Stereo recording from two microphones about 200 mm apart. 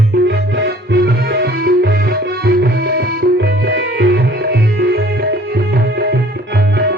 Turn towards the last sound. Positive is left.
turn(degrees=-55)  # may be behind; listen again after turning